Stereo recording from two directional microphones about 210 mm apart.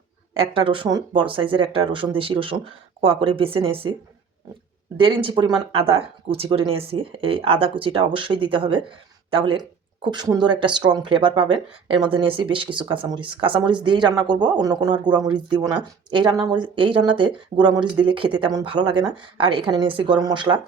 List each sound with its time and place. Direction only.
0.3 s speech: 25° right (ahead or behind)
4.9 s speech: 25° right (ahead or behind)